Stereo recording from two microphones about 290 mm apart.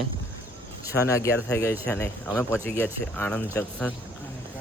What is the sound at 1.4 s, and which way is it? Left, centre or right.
Speech, centre.